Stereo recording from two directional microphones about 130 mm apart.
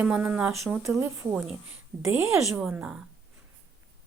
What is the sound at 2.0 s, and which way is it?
Speech, 20° right (ahead or behind).